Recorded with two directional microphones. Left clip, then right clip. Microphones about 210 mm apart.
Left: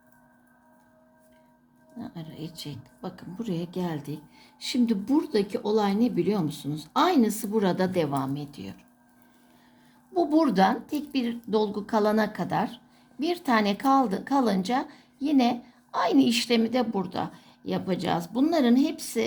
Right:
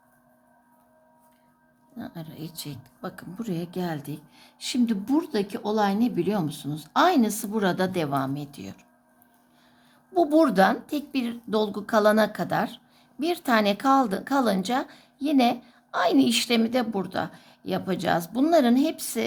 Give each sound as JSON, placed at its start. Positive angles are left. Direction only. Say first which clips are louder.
{"t": 2.0, "sound": "a woman's voice", "louder": "right 1 dB", "side_deg": -20}
{"t": 10.2, "sound": "a woman's voice", "louder": "right 3 dB", "side_deg": -20}